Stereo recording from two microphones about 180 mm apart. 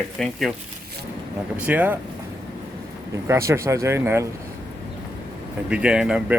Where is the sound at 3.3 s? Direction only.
15° right (ahead or behind).